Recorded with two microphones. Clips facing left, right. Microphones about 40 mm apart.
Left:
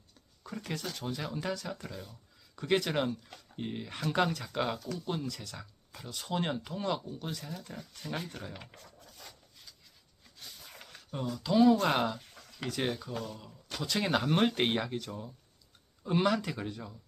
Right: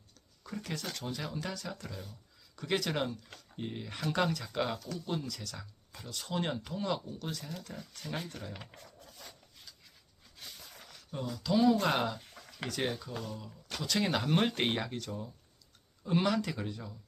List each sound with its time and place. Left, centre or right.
0.4 s speech: centre
8.3 s speech: centre
8.5 s speech: centre
10.9 s a sound: centre
11.5 s speech: centre
12.3 s a sound: centre
12.6 s speech: centre